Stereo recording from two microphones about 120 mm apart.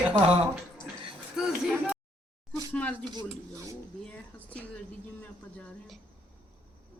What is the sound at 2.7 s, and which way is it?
Speech, 10° left (ahead or behind).